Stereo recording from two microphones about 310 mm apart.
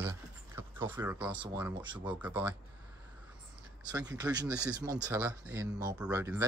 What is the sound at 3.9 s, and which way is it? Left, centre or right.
Speech, centre.